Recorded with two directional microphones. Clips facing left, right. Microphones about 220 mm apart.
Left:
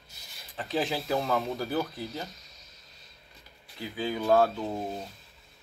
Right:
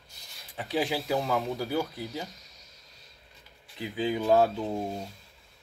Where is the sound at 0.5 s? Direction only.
10° right (ahead or behind).